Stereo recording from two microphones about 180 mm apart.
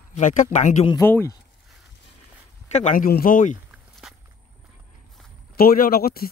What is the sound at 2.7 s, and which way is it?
Speech, 40° left (ahead or behind).